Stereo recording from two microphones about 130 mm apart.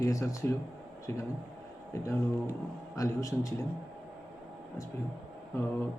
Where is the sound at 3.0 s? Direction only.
25° left (ahead or behind).